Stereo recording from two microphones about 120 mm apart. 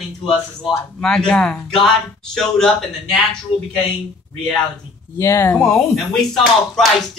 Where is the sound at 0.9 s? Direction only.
5° left (ahead or behind).